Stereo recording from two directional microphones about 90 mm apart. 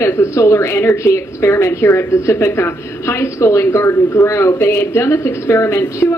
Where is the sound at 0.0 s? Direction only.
30° left (ahead or behind).